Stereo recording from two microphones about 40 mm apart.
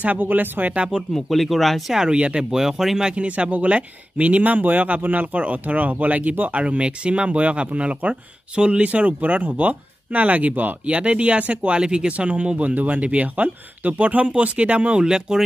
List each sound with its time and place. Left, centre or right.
0.2 s speech: right
1.1 s speech: centre
2.0 s speech: right
2.5 s speech: centre
3.2 s speech: right
6.6 s speech: right
10.9 s speech: right
11.8 s speech: right
12.1 s speech: right